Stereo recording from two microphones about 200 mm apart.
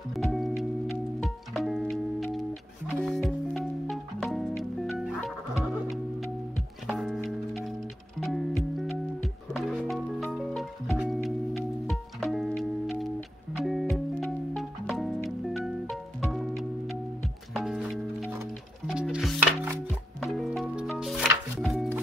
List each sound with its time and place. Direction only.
0.1 s music: centre (ahead or behind)